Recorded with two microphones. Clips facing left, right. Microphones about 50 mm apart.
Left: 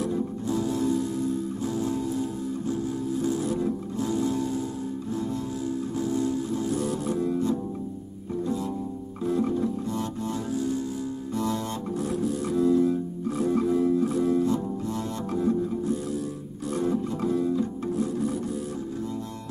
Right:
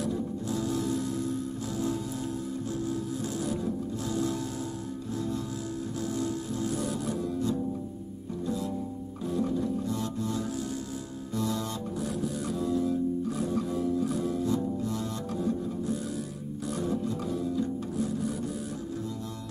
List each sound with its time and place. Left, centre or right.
0.0 s music: left
3.4 s music: left
6.7 s music: left
9.2 s music: left